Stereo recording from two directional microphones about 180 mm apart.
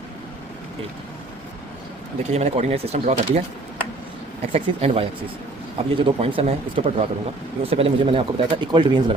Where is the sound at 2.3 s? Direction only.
40° right (ahead or behind).